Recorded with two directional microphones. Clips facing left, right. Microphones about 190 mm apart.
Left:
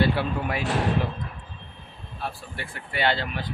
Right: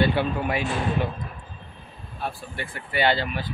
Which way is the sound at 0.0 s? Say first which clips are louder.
Right 1 dB; centre (ahead or behind).